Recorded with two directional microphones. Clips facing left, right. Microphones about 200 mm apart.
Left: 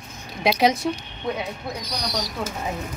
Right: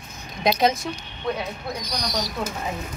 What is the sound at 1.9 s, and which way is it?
Speech, 10° left (ahead or behind).